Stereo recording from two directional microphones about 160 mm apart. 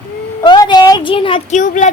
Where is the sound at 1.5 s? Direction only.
50° left (ahead or behind).